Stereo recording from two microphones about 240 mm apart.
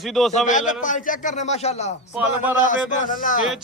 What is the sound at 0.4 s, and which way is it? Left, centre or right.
A man's voice, left.